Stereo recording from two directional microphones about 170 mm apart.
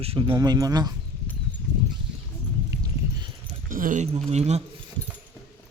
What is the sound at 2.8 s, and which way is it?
Clip-clop, 25° right (ahead or behind).